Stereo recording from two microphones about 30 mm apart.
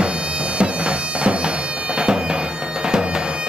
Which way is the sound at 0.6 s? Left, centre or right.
Right.